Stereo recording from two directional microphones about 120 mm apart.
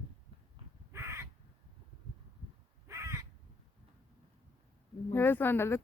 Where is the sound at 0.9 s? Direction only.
20° right (ahead or behind).